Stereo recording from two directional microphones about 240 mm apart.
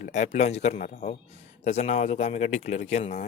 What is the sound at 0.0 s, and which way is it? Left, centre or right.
Speech, left.